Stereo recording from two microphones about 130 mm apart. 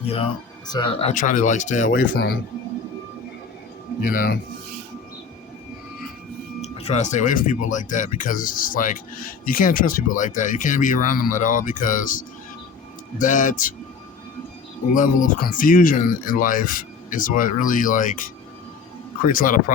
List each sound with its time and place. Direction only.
0.0 s speech: 50° left (ahead or behind)
0.7 s speech: 40° left (ahead or behind)
1.1 s speech: 85° left
4.0 s speech: 90° left
6.6 s speech: 55° left (ahead or behind); by 12.2 s 90° left
13.1 s speech: 80° left
14.9 s speech: 90° left